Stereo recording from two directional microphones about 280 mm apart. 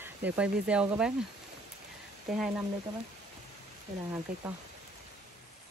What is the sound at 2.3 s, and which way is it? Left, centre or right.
Speech, centre.